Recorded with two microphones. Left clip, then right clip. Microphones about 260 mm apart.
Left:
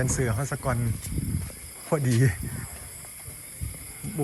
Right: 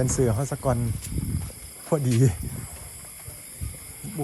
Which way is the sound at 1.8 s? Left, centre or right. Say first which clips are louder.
Right 1 dB; centre.